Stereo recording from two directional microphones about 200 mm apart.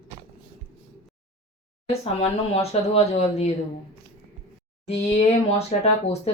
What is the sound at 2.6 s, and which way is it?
Speech, 30° left (ahead or behind).